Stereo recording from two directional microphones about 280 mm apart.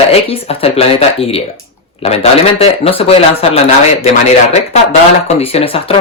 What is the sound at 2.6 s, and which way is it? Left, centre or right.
Speech, left.